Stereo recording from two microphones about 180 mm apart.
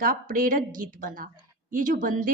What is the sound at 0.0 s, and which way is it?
A woman's voice, 50° right (ahead or behind).